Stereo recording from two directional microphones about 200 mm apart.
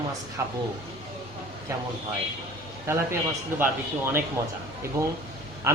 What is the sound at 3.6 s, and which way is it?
Speech, 10° right (ahead or behind).